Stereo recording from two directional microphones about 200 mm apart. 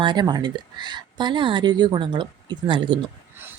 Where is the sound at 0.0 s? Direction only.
20° right (ahead or behind).